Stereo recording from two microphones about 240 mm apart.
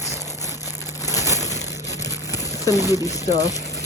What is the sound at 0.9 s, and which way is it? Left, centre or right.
Crushing, centre.